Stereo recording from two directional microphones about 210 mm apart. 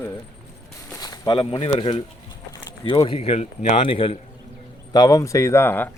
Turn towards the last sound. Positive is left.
turn(degrees=10)  # may be behind; listen again after turning